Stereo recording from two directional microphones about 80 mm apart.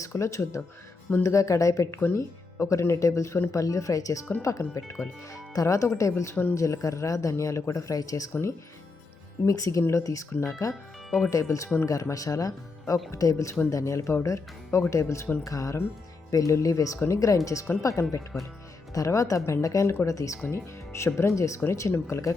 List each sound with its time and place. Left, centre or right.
0.0 s speech: left
8.3 s speech: left